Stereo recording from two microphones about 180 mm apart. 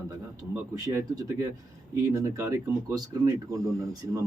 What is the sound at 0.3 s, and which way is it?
Speech, 20° right (ahead or behind).